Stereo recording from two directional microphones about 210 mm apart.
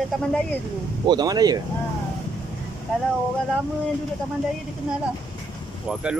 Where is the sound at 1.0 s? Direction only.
20° right (ahead or behind).